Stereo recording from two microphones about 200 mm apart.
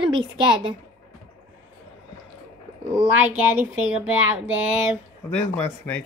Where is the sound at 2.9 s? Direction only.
10° right (ahead or behind).